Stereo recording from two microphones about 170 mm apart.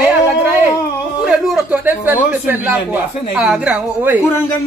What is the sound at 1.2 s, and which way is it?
A woman's voice, 5° right (ahead or behind).